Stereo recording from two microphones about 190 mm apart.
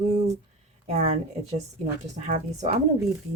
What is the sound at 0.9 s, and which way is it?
Speech, 35° right (ahead or behind).